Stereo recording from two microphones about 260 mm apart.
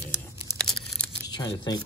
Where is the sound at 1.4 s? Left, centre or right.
Centre.